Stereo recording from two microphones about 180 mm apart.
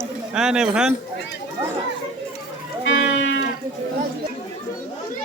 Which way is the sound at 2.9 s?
90° left.